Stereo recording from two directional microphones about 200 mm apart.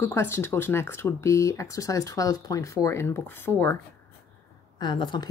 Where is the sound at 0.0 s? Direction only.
15° left (ahead or behind).